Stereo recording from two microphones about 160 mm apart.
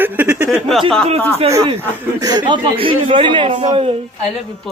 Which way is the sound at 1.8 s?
25° right (ahead or behind).